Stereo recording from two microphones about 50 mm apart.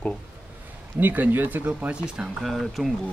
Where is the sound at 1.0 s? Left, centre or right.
Right.